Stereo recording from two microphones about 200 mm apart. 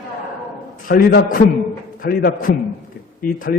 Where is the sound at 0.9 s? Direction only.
45° left (ahead or behind).